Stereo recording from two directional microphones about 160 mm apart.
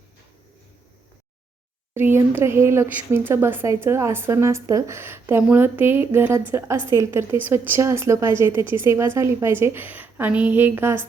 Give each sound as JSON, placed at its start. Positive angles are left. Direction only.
{"t": 1.9, "sound": "speech", "side_deg": -15}